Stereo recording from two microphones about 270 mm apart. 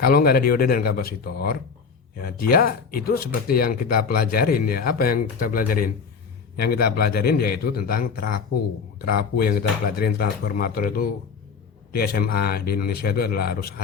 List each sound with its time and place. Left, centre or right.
0.0 s speech: left